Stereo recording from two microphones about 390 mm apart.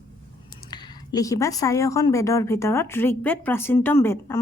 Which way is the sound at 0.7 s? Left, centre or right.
Centre.